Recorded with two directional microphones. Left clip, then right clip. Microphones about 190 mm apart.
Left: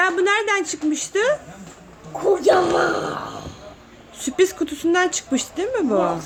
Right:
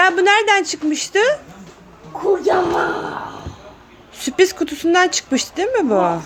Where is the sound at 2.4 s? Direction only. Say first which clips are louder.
Left 3 dB; 50° left (ahead or behind).